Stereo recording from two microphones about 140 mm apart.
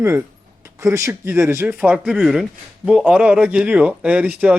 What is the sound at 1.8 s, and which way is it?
A man's voice, 5° right (ahead or behind).